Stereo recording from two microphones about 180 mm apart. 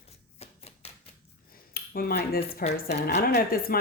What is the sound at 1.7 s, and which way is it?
A woman's voice, 55° left (ahead or behind).